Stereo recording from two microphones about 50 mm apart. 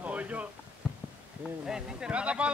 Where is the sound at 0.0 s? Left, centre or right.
Right.